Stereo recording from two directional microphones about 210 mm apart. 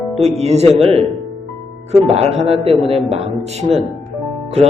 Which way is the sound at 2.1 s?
30° right (ahead or behind).